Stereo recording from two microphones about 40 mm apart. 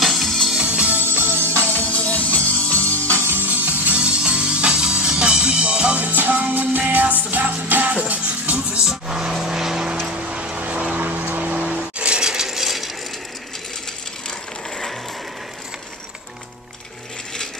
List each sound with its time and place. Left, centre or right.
0.0 s music: centre
0.7 s music: right
1.1 s music: right
1.9 s music: left
3.3 s music: right
3.9 s music: right
5.9 s music: right
9.1 s vehicle: centre
10.0 s vehicle: right
11.1 s music: right
12.2 s mechanisms: centre